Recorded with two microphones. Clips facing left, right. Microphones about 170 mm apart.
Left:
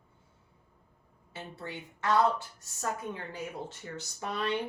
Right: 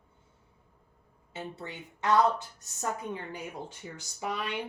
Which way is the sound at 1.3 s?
20° right (ahead or behind).